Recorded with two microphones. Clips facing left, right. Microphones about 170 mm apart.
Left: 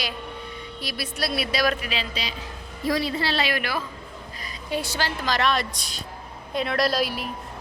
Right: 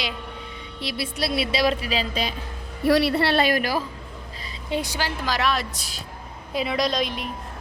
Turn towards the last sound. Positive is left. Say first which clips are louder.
# left 1 dB
turn(degrees=5)  # may be behind; listen again after turning